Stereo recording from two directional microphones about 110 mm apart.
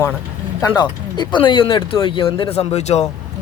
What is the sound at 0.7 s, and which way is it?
Speech, 40° left (ahead or behind).